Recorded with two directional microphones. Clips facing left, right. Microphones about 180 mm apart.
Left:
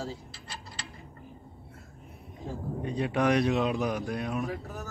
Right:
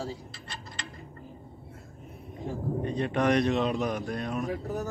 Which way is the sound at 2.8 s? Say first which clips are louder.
Even; 5° left (ahead or behind).